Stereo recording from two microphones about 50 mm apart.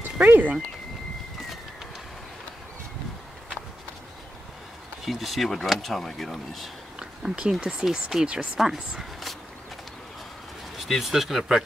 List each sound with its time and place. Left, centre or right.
0.0 s speech: right
5.0 s speech: centre
7.0 s a sound: centre
7.6 s speech: centre
10.9 s speech: centre